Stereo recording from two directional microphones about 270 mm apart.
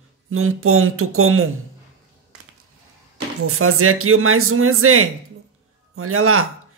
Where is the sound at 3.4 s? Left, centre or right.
Right.